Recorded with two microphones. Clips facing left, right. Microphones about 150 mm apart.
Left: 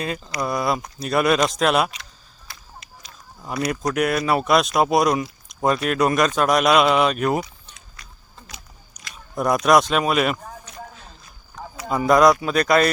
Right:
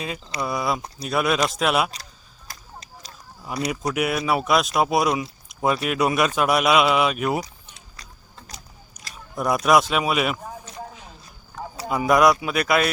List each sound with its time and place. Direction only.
0.3 s speech: centre (ahead or behind)
2.5 s whip: 35° right (ahead or behind)
3.7 s a man's voice: 10° right (ahead or behind)
8.0 s a sound: 35° right (ahead or behind)
9.3 s speech: centre (ahead or behind)
11.9 s a man's voice: 10° right (ahead or behind)